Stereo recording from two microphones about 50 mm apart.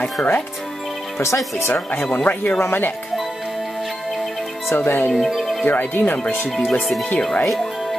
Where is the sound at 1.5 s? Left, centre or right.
Left.